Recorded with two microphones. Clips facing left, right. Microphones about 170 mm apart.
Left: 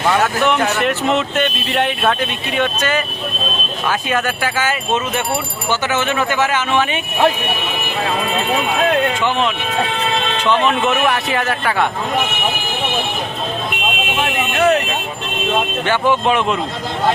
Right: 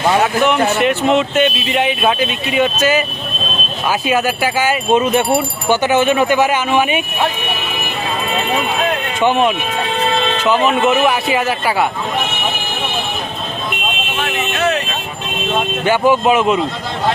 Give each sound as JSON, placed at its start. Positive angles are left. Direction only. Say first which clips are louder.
{"t": 0.2, "sound": "speech", "louder": "right 2 dB", "side_deg": 0}
{"t": 10.4, "sound": "speech", "louder": "right 2 dB", "side_deg": -5}
{"t": 15.9, "sound": "speech", "louder": "right 4 dB", "side_deg": -10}